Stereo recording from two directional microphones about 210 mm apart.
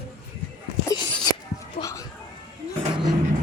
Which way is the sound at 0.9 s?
15° left (ahead or behind).